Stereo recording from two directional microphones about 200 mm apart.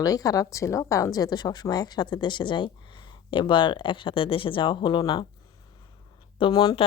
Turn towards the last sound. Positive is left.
turn(degrees=20)  # may be behind; listen again after turning